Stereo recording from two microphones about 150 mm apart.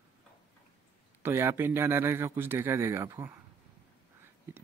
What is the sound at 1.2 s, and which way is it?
Speech, 20° right (ahead or behind).